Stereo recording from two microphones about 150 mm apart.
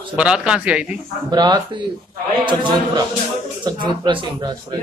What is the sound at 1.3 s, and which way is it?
Speech, 30° right (ahead or behind).